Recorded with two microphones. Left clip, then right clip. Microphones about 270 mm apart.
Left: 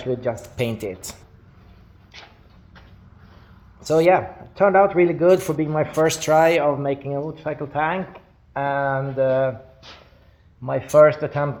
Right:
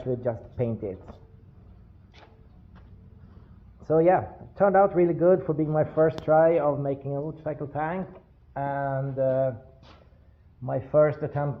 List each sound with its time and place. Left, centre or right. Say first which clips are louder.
0.3 s speech: left 4 dB; centre
2.1 s vehicle: left 11 dB; centre
3.8 s speech: left 5 dB; centre
10.7 s speech: left 8 dB; centre